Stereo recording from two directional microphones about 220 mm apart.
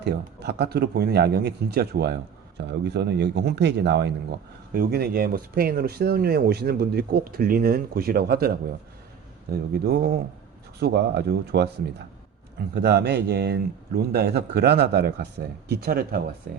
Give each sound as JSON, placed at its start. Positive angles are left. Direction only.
{"t": 0.0, "sound": "speech", "side_deg": -50}